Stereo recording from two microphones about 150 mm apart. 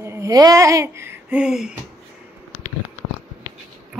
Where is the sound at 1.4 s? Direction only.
5° right (ahead or behind).